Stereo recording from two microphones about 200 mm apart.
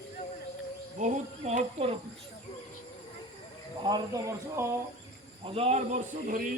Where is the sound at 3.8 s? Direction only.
20° right (ahead or behind).